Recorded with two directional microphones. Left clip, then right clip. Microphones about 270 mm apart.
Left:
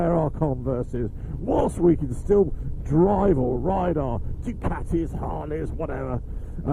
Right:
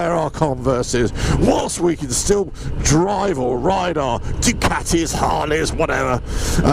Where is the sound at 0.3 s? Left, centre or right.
Centre.